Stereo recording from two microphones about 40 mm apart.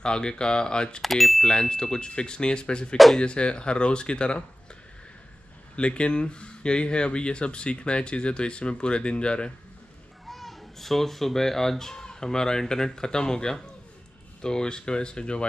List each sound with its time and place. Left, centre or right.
0.0 s speech: left
1.0 s speech: centre
1.4 s speech: left
5.8 s speech: left
10.2 s a child's voice: centre; by 15.4 s left